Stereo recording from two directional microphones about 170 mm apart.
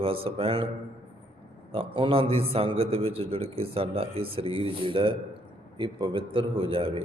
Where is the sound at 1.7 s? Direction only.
30° right (ahead or behind).